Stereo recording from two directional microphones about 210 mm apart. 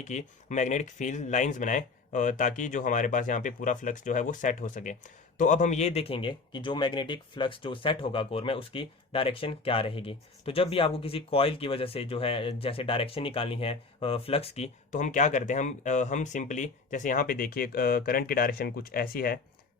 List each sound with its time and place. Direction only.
0.0 s speech: 35° left (ahead or behind)